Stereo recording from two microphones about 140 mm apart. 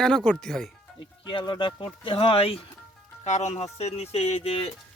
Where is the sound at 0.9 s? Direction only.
35° left (ahead or behind).